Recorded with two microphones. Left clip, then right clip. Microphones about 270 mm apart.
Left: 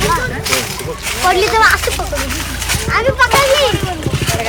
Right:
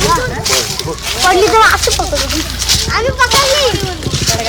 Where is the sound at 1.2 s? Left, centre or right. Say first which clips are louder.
Right 2 dB; right.